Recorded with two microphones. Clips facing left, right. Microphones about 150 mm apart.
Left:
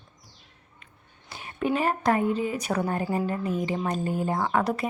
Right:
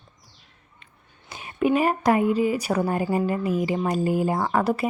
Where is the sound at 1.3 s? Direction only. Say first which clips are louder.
Right 5 dB; 20° right (ahead or behind).